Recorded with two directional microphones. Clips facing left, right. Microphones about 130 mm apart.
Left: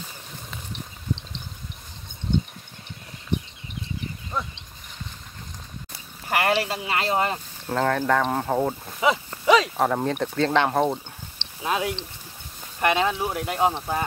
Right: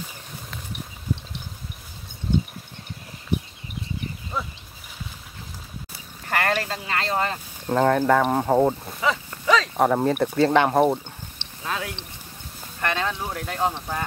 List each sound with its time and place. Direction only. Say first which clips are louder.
0.7 s a sound: right 1 dB; 10° right (ahead or behind)
2.3 s mechanisms: right 1 dB; 5° right (ahead or behind)
4.3 s a sound: even; 5° right (ahead or behind)
6.2 s speech: left 2 dB; 15° left (ahead or behind)
7.6 s speech: right 4 dB; 10° right (ahead or behind)
9.0 s livestock: left 3 dB; 15° left (ahead or behind)
9.8 s speech: right 3 dB; 5° right (ahead or behind)
11.6 s speech: left 5 dB; 15° left (ahead or behind)